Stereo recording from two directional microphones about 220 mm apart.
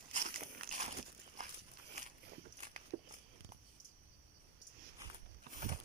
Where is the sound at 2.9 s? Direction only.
45° right (ahead or behind).